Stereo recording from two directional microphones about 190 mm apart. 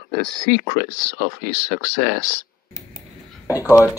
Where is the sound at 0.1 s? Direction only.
50° right (ahead or behind).